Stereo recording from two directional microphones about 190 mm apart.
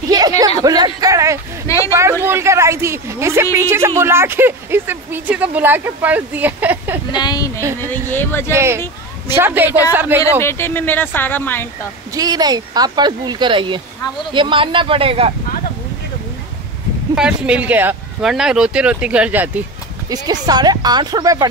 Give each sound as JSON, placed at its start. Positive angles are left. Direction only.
{"t": 0.6, "sound": "speech", "side_deg": -20}
{"t": 7.1, "sound": "a woman's voice", "side_deg": 20}
{"t": 8.5, "sound": "speech", "side_deg": -15}
{"t": 10.4, "sound": "speech", "side_deg": 10}
{"t": 12.1, "sound": "speech", "side_deg": -20}
{"t": 17.1, "sound": "speech", "side_deg": -5}
{"t": 20.1, "sound": "speech", "side_deg": -20}